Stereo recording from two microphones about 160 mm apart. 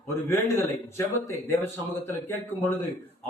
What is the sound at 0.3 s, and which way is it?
A man's voice, 15° left (ahead or behind).